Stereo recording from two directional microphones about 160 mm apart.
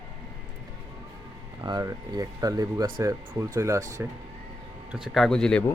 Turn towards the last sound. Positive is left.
turn(degrees=5)  # may be behind; listen again after turning